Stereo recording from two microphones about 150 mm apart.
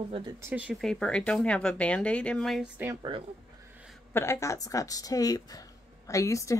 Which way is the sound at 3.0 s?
35° right (ahead or behind).